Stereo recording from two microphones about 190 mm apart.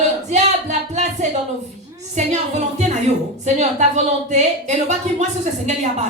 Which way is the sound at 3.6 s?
35° right (ahead or behind).